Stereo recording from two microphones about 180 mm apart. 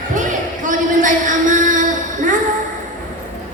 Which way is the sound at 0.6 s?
45° right (ahead or behind).